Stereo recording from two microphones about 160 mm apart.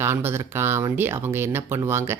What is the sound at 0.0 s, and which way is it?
Speech, 15° right (ahead or behind).